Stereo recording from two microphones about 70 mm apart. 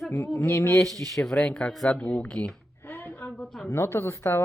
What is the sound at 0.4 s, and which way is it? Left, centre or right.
Speech, left.